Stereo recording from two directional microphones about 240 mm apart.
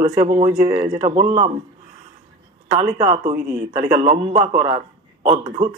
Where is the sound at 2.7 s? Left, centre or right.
Right.